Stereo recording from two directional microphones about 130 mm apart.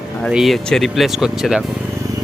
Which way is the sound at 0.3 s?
Centre (ahead or behind).